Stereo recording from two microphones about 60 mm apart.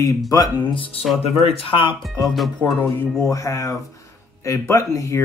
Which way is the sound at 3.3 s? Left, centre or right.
Left.